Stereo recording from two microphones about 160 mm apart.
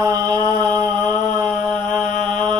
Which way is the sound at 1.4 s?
Centre (ahead or behind).